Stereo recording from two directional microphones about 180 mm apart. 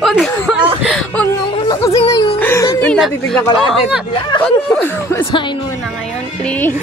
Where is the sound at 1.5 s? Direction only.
20° left (ahead or behind).